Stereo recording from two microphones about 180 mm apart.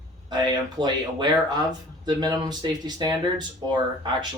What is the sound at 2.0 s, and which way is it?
Speech, 25° right (ahead or behind).